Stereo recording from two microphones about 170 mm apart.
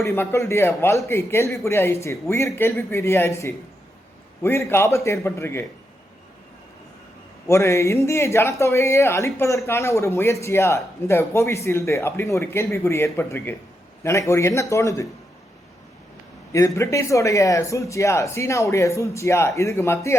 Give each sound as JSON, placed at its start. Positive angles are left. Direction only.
{"t": 0.0, "sound": "speech", "side_deg": 15}
{"t": 7.4, "sound": "speech", "side_deg": 15}
{"t": 16.5, "sound": "speech", "side_deg": 20}